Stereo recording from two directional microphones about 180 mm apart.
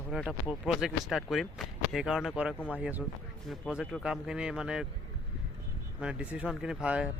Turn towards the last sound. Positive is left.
turn(degrees=-5)  # may be behind; listen again after turning